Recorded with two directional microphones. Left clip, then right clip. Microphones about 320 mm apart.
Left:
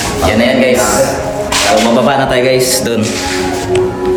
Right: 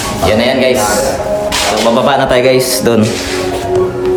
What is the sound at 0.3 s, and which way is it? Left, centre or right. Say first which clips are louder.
Speech: even; centre.